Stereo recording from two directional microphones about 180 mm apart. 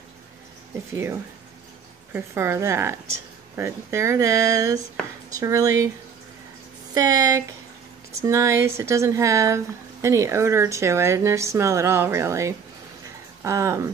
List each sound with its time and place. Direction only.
2.1 s speech: 15° right (ahead or behind)
6.9 s speech: 20° right (ahead or behind)